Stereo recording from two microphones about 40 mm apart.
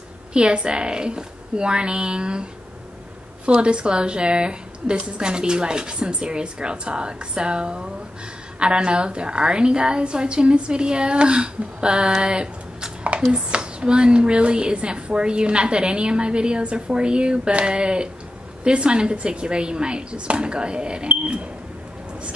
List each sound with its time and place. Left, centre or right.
0.3 s a woman's voice: right
3.5 s a woman's voice: right